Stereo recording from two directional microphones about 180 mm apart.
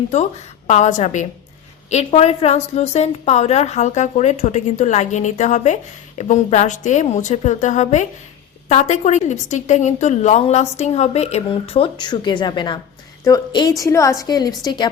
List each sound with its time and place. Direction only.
0.7 s a woman's voice: 40° left (ahead or behind); by 14.8 s 25° left (ahead or behind)